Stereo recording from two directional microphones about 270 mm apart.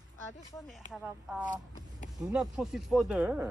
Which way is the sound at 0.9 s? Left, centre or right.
Centre.